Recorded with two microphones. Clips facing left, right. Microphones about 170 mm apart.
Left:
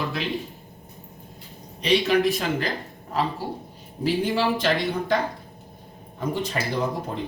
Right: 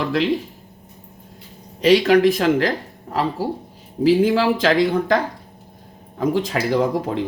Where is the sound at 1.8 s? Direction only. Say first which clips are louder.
Right 7 dB; 90° right.